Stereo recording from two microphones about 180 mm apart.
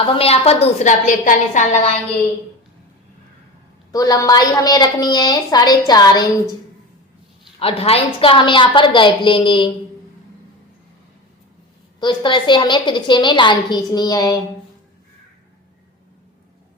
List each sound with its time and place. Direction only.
0.1 s a woman's voice: 35° left (ahead or behind)
3.9 s a woman's voice: 20° left (ahead or behind)
7.6 s a woman's voice: 30° left (ahead or behind)
11.9 s a woman's voice: 25° left (ahead or behind)